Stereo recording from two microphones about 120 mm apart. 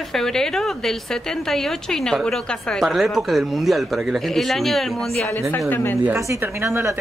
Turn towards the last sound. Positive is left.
turn(degrees=-20)  # may be behind; listen again after turning